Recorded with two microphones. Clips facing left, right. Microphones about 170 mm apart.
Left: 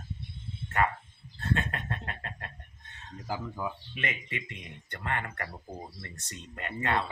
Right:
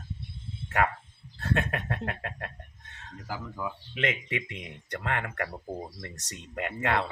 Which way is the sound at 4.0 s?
90° right.